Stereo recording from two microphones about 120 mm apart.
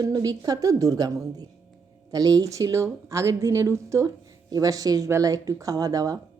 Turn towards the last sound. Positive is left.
turn(degrees=-30)  # may be behind; listen again after turning